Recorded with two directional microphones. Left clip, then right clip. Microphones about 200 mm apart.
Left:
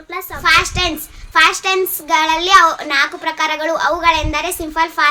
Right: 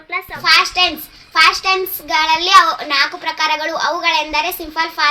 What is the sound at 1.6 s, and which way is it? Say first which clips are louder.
Child singing: even; 20° left (ahead or behind).